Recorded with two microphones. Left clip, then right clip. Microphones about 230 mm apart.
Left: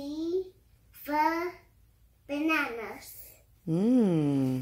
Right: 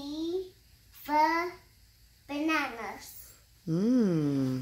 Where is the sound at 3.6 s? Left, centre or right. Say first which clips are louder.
Left 2 dB; centre.